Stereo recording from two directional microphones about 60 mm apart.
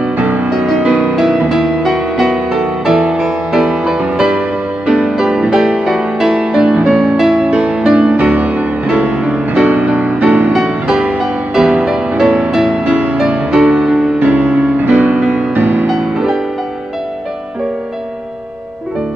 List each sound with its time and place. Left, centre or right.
0.2 s music: right
0.5 s music: centre
0.8 s music: right
1.1 s music: centre
8.3 s music: right
11.1 s music: centre
14.2 s music: right
14.9 s music: centre
15.5 s music: right
15.9 s music: centre